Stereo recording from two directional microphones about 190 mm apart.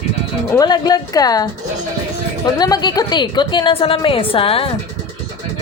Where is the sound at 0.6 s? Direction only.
20° left (ahead or behind).